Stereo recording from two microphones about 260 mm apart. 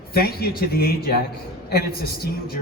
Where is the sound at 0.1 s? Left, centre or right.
Left.